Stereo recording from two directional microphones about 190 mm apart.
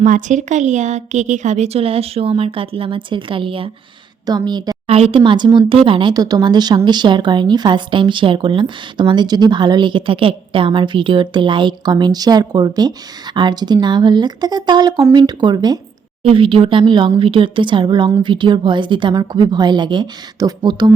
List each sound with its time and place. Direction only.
0.0 s a woman's voice: 40° right (ahead or behind); by 20.9 s 25° right (ahead or behind)